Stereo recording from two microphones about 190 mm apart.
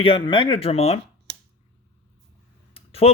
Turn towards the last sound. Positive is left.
turn(degrees=30)  # may be behind; listen again after turning